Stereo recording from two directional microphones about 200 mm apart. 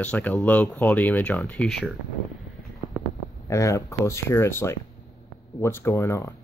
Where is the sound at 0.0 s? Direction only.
5° left (ahead or behind).